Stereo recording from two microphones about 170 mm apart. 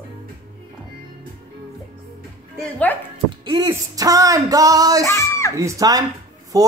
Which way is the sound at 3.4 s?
25° right (ahead or behind).